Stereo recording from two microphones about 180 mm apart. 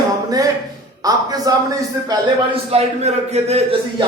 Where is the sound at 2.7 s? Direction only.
35° right (ahead or behind).